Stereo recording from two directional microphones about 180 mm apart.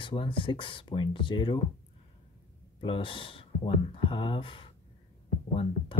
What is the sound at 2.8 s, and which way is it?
Speech, 30° left (ahead or behind).